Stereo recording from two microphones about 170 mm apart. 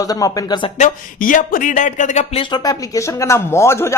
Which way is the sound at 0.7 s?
50° left (ahead or behind).